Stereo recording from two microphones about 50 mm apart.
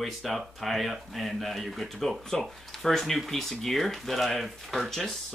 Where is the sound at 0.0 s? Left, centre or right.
Centre.